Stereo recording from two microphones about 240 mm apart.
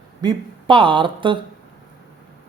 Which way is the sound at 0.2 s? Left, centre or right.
Centre.